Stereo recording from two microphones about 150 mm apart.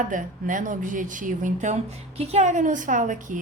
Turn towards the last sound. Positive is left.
turn(degrees=-60)  # may be behind; listen again after turning